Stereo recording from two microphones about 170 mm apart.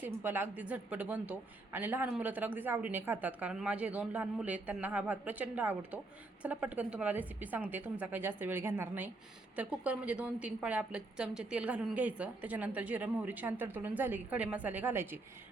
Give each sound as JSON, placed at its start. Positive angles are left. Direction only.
{"t": 0.0, "sound": "speech", "side_deg": -10}